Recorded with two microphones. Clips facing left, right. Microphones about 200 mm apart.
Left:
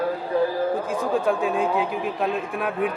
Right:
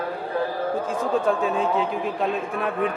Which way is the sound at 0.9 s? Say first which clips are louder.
Even; centre (ahead or behind).